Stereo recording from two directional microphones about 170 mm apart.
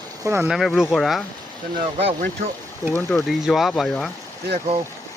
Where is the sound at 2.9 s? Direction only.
10° left (ahead or behind).